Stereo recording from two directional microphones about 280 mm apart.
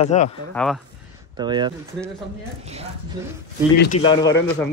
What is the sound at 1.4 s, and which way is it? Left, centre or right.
Speech, centre.